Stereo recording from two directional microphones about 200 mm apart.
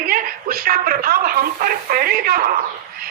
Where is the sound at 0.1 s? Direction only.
45° right (ahead or behind).